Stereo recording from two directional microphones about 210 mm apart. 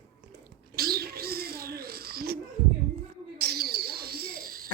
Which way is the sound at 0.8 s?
45° right (ahead or behind).